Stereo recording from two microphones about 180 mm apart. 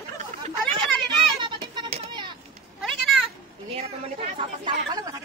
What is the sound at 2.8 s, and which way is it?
Cat, centre (ahead or behind).